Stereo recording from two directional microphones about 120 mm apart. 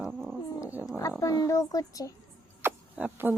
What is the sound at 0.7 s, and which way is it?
Speech, 15° right (ahead or behind).